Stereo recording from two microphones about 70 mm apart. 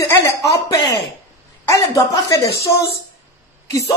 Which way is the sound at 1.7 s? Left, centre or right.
Left.